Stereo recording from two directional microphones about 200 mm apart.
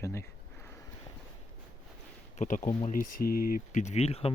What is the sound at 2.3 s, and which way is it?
Speech, 40° left (ahead or behind).